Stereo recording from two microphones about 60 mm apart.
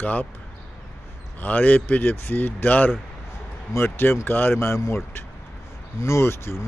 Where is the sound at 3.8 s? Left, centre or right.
Left.